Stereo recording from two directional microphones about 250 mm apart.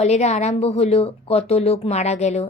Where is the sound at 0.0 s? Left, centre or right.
Left.